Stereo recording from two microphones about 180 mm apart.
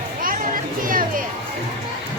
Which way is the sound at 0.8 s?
50° right (ahead or behind).